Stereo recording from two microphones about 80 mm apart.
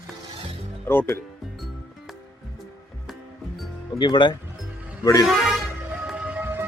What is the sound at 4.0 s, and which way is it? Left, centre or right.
Speech, left.